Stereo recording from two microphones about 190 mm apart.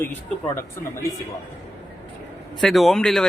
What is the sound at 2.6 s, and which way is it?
Speech, centre (ahead or behind).